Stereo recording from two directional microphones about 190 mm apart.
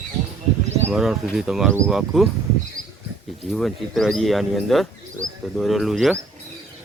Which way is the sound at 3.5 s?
Centre (ahead or behind).